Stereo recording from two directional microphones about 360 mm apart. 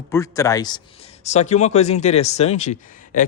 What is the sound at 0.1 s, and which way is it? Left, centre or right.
A man's voice, centre.